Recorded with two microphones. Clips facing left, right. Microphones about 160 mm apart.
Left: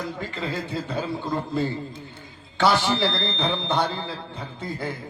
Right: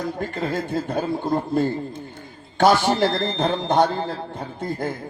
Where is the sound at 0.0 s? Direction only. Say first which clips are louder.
Right 4 dB; 50° right (ahead or behind).